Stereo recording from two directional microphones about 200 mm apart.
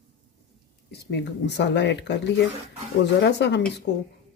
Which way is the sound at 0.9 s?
55° left (ahead or behind).